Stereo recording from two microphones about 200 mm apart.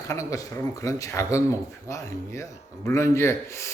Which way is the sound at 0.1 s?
15° left (ahead or behind).